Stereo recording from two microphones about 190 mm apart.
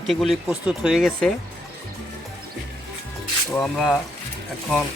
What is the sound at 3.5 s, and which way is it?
Speech, centre (ahead or behind).